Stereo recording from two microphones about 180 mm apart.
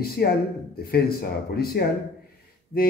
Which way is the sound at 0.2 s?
60° left (ahead or behind).